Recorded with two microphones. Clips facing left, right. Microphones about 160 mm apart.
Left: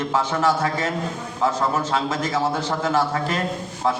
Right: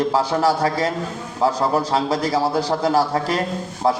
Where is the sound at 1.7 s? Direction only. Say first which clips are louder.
Right 3 dB; 35° right (ahead or behind).